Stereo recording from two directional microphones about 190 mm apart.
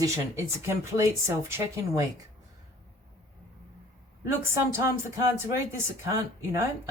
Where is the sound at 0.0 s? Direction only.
15° right (ahead or behind).